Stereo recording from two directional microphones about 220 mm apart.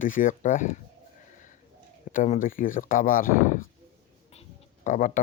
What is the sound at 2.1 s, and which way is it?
Speech, 35° left (ahead or behind).